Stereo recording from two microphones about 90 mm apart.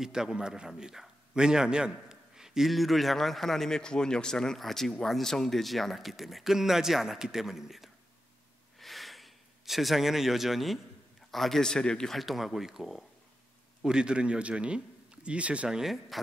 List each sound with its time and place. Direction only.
0.0 s a man's voice: 5° right (ahead or behind)
8.7 s a sound: centre (ahead or behind)
11.3 s a man's voice: 5° left (ahead or behind); by 15.8 s 15° right (ahead or behind)
15.8 s a man's voice: centre (ahead or behind)